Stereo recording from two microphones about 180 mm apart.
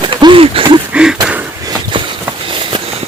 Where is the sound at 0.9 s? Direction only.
5° right (ahead or behind).